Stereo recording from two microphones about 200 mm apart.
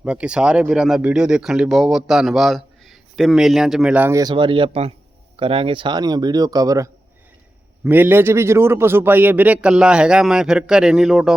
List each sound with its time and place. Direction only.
0.0 s speech: 5° right (ahead or behind)